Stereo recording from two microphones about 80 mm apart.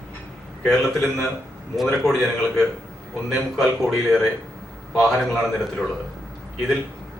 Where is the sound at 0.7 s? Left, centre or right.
Centre.